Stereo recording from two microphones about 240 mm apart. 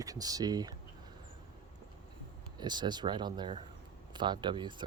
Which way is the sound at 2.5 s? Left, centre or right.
Centre.